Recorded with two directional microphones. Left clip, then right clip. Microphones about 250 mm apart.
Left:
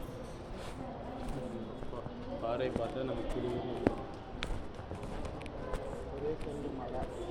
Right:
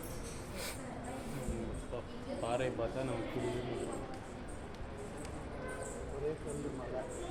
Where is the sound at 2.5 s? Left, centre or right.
Right.